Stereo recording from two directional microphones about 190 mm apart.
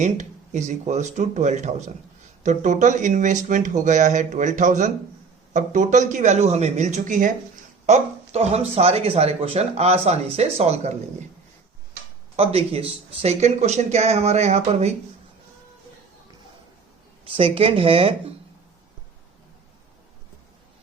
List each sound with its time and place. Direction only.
0.0 s speech: 40° right (ahead or behind)
12.4 s speech: 30° right (ahead or behind)
17.2 s speech: 30° right (ahead or behind)